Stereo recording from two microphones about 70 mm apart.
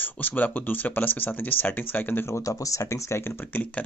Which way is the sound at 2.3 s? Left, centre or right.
Left.